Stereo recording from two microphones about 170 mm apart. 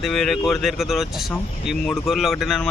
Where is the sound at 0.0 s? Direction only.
Centre (ahead or behind).